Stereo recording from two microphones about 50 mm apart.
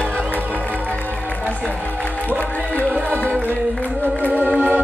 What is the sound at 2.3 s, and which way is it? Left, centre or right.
Music, left.